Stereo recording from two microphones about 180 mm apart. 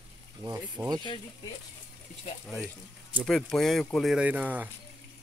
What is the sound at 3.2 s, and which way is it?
Speech, centre (ahead or behind).